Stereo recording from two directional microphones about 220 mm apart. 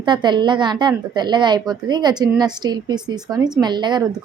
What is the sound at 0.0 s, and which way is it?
A woman's voice, 20° right (ahead or behind).